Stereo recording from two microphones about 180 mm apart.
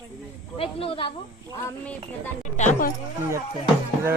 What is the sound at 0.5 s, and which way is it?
Speech, 30° left (ahead or behind).